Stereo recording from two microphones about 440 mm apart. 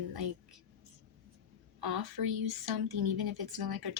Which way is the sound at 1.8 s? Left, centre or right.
Right.